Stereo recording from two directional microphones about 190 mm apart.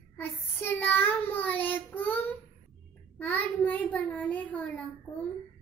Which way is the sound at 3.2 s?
10° left (ahead or behind).